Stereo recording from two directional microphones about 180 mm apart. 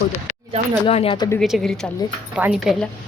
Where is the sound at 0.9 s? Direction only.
30° left (ahead or behind).